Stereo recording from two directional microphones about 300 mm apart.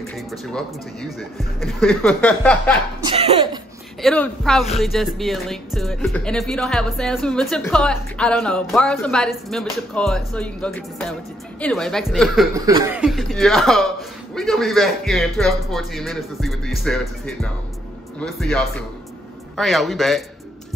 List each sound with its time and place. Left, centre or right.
0.3 s speech: centre
3.0 s speech: centre
4.0 s speech: centre
12.5 s speech: centre